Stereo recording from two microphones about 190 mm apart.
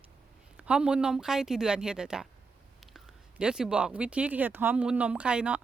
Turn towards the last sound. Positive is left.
turn(degrees=-5)  # may be behind; listen again after turning